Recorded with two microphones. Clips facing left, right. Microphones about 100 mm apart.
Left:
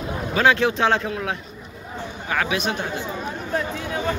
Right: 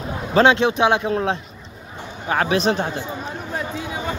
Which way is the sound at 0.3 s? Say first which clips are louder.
Right 3 dB; 25° right (ahead or behind).